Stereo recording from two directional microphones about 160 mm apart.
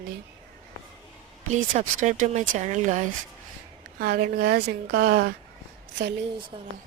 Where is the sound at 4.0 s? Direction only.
75° right (ahead or behind).